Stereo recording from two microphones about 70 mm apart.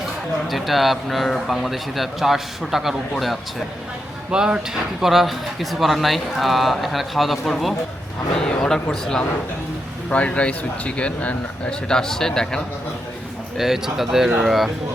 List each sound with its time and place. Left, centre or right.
0.5 s speech: centre
13.6 s speech: centre